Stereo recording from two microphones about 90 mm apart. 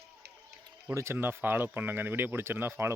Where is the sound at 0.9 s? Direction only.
30° right (ahead or behind).